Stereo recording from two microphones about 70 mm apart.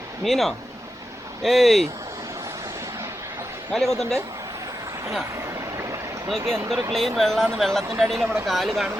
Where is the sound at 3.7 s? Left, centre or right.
Centre.